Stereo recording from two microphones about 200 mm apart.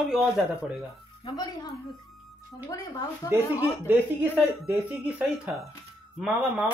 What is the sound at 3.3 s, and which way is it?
Speech, 10° right (ahead or behind).